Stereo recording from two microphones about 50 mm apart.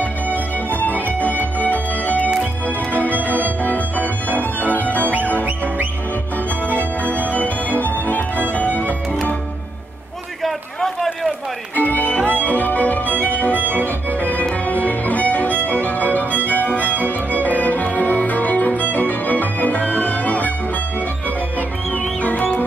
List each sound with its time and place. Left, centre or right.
0.0 s music: left
5.0 s music: right
6.7 s music: left
10.4 s a sound: centre
11.7 s music: left
14.7 s music: left
21.5 s music: left